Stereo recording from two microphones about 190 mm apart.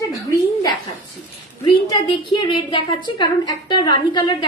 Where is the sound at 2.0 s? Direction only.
25° left (ahead or behind).